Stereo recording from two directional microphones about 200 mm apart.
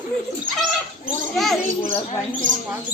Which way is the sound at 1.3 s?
Centre (ahead or behind).